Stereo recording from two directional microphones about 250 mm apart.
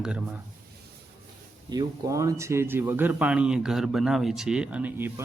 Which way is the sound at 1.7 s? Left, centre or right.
Centre.